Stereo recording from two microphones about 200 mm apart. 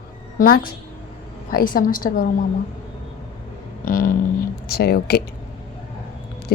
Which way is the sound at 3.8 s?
45° left (ahead or behind).